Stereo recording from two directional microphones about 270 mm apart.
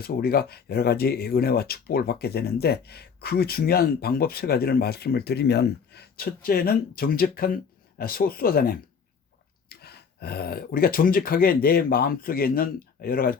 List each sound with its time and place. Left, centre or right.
0.0 s speech: left